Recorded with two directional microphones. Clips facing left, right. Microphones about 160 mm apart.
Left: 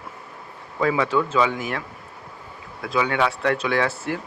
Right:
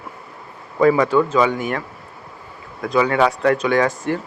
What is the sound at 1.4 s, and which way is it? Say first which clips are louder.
Speech: right 4 dB; centre (ahead or behind).